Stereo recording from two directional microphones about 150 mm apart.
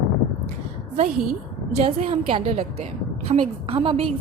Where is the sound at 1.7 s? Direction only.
45° right (ahead or behind).